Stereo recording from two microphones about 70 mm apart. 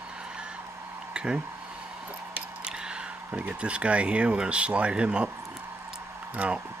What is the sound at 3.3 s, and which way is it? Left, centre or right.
Speech, right.